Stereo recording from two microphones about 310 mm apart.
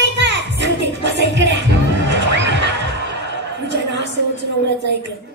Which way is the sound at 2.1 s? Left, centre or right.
Right.